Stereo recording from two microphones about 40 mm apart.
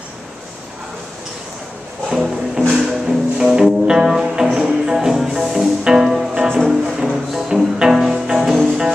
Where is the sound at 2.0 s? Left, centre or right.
Centre.